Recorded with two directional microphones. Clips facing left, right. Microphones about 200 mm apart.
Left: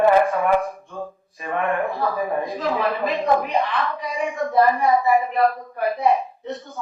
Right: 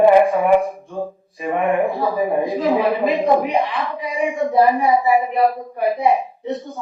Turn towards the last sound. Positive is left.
turn(degrees=-15)  # may be behind; listen again after turning